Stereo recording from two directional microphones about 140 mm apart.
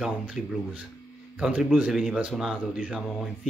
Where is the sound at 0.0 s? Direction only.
5° right (ahead or behind).